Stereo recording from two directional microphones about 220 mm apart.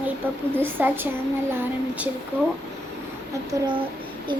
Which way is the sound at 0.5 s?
10° right (ahead or behind).